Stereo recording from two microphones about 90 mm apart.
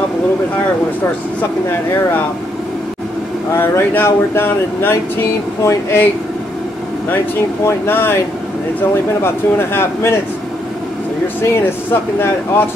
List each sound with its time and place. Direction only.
3.5 s speech: 25° left (ahead or behind)
7.6 s speech: 25° left (ahead or behind)
9.2 s speech: 25° left (ahead or behind)
11.5 s speech: 25° left (ahead or behind)